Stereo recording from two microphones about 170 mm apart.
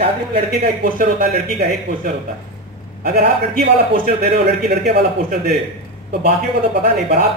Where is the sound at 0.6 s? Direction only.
55° right (ahead or behind).